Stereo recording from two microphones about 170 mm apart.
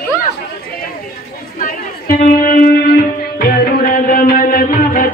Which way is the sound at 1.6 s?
55° left (ahead or behind).